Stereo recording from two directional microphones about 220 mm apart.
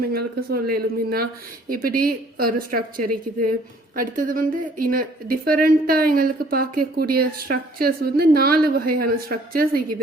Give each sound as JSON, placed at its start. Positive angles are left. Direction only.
{"t": 0.1, "sound": "a woman's voice", "side_deg": -45}